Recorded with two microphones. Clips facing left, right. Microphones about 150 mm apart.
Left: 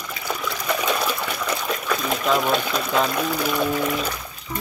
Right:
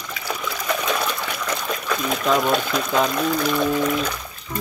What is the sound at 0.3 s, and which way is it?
Trickle, centre (ahead or behind).